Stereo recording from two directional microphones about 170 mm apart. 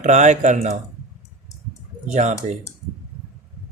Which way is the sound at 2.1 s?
45° right (ahead or behind).